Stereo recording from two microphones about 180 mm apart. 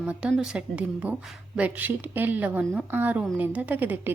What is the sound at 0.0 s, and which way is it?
A woman's voice, 5° right (ahead or behind).